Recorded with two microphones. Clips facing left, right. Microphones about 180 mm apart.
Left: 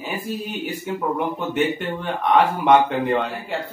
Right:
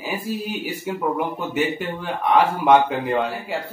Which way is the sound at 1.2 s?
5° right (ahead or behind).